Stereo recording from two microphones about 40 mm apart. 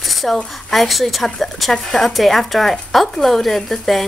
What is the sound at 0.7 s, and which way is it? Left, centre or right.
A woman's voice, centre.